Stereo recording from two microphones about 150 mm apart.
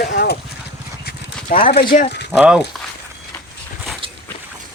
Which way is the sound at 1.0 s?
80° left.